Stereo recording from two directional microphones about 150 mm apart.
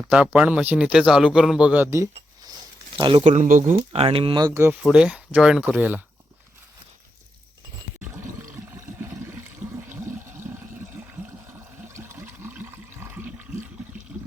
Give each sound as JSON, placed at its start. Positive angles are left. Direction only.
{"t": 0.1, "sound": "a man's voice", "side_deg": -10}
{"t": 3.0, "sound": "speech", "side_deg": -35}
{"t": 3.3, "sound": "speech", "side_deg": -60}
{"t": 3.9, "sound": "speech", "side_deg": -40}
{"t": 4.4, "sound": "a man's voice", "side_deg": -15}
{"t": 4.8, "sound": "a man's voice", "side_deg": -5}
{"t": 11.9, "sound": "water", "side_deg": -20}